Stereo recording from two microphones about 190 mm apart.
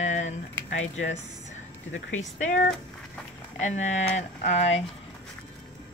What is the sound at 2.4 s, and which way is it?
Speech, 40° left (ahead or behind).